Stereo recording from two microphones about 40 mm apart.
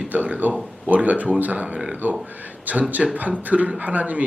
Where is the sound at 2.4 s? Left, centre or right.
Right.